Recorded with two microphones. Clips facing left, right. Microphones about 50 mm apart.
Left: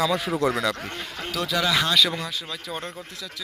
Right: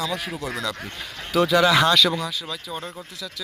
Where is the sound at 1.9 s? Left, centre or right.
Centre.